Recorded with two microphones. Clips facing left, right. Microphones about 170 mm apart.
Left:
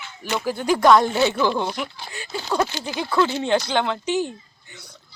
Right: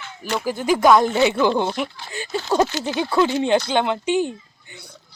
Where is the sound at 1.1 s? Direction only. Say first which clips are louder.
Right 3 dB; 15° right (ahead or behind).